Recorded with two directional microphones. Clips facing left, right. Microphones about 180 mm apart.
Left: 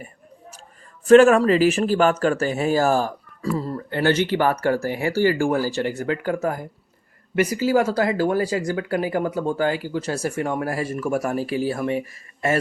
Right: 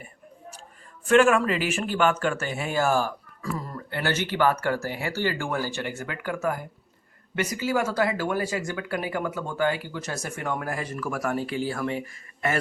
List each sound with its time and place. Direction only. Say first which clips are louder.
1.0 s speech: left 7 dB; 40° left (ahead or behind)
3.9 s speech: left 6 dB; 15° left (ahead or behind)
5.5 s speech: left 7 dB; 35° left (ahead or behind)